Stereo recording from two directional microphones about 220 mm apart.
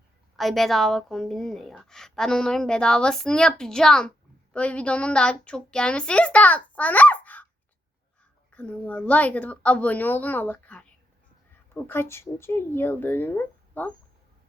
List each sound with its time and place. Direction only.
0.3 s a woman's voice: centre (ahead or behind)
6.7 s a sound: 5° left (ahead or behind)
8.5 s a woman's voice: 5° left (ahead or behind)